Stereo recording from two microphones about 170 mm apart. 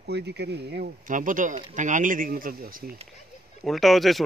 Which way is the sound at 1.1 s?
50° right (ahead or behind).